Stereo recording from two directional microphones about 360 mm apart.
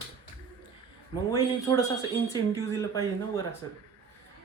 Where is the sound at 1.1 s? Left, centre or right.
Centre.